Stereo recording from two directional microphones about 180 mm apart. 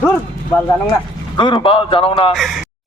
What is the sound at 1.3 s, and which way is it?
A man's voice, 25° left (ahead or behind).